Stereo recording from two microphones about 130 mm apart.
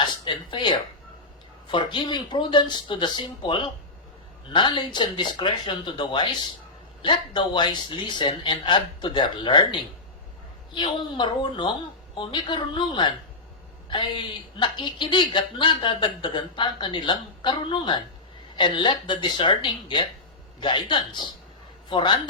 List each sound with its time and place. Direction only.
0.0 s a sound: 35° left (ahead or behind)
1.6 s a woman's voice: 40° left (ahead or behind)
10.8 s a woman's voice: 40° left (ahead or behind)